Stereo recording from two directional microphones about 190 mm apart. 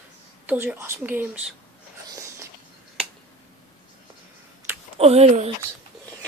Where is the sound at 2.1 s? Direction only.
15° right (ahead or behind).